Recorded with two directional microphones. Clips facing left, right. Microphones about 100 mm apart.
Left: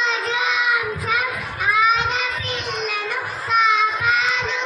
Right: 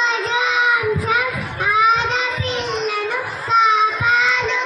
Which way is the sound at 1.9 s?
30° right (ahead or behind).